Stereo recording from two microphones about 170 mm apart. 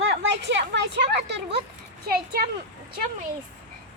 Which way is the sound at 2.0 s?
70° right (ahead or behind).